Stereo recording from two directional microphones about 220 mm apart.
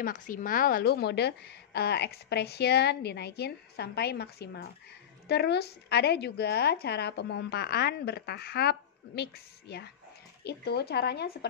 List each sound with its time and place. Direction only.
0.0 s a woman's voice: 40° left (ahead or behind)